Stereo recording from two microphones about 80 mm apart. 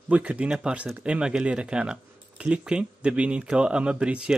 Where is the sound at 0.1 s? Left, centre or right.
Centre.